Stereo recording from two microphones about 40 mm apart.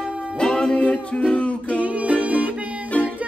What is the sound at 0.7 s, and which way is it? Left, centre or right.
Music, left.